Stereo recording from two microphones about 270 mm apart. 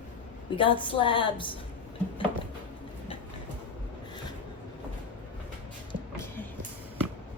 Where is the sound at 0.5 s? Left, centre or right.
Centre.